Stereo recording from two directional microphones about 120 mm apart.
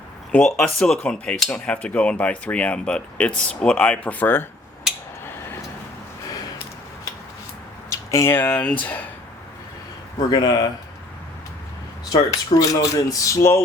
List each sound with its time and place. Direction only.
0.3 s speech: 5° left (ahead or behind)
7.9 s speech: 25° left (ahead or behind)
10.2 s speech: 35° left (ahead or behind)
12.1 s speech: 30° left (ahead or behind)